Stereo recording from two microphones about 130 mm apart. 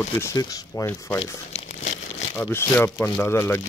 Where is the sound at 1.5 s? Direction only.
50° left (ahead or behind).